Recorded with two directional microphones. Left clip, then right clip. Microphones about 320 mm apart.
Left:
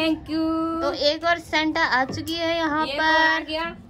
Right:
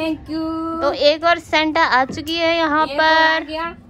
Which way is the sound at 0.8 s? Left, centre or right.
Centre.